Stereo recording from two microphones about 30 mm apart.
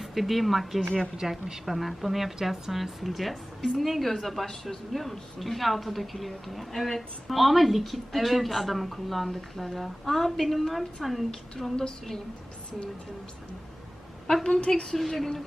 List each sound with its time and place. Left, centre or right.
0.0 s a woman's voice: centre
14.4 s a woman's voice: left
14.9 s a woman's voice: centre